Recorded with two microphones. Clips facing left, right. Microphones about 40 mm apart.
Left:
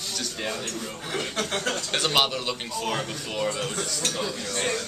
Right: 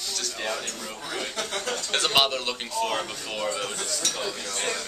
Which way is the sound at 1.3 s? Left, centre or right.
Left.